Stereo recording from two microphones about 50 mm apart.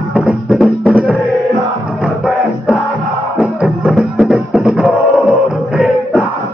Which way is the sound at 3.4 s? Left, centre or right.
Right.